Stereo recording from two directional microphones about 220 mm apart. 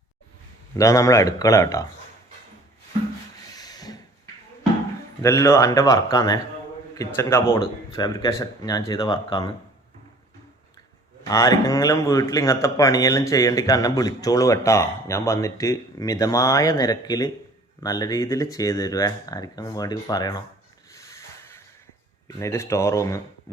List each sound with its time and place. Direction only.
0.7 s a man's voice: 15° left (ahead or behind)
3.5 s a sound: 15° left (ahead or behind)
5.2 s a man's voice: 15° left (ahead or behind)
11.2 s a man's voice: 15° left (ahead or behind)
20.9 s a sound: 15° left (ahead or behind)
22.4 s a man's voice: 15° left (ahead or behind)